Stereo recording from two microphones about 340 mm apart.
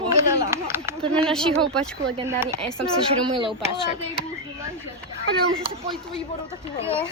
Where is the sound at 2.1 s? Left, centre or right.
Centre.